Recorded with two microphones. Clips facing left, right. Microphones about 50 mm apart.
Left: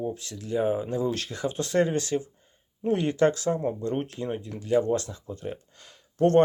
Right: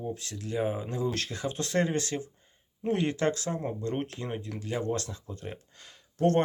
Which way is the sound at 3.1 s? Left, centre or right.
Left.